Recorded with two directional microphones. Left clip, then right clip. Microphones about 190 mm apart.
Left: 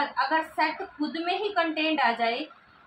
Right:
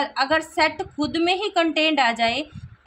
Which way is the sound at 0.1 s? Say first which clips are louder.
Right 4 dB; 75° right (ahead or behind).